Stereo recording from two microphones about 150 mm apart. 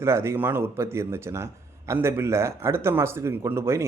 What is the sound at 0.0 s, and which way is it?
A man's voice, 15° right (ahead or behind).